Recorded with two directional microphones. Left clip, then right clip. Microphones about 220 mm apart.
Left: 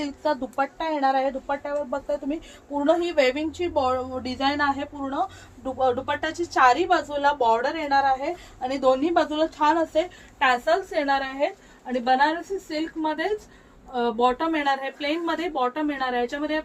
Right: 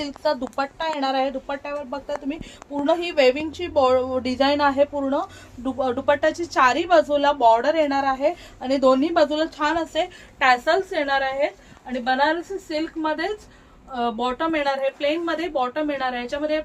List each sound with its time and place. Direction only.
0.0 s a woman's voice: 45° right (ahead or behind)
10.9 s a woman's voice: 20° right (ahead or behind)